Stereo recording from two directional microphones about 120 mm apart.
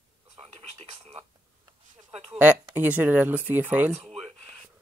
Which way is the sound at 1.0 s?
50° right (ahead or behind).